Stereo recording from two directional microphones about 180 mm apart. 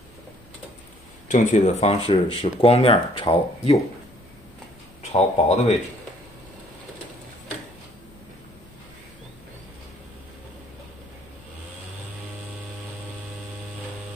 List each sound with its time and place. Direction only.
1.3 s speech: 45° left (ahead or behind)
5.1 s speech: 40° left (ahead or behind)